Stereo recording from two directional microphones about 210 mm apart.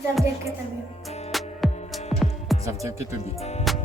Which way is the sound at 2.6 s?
15° right (ahead or behind).